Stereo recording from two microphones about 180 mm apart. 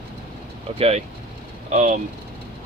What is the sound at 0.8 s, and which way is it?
Speech, 35° right (ahead or behind).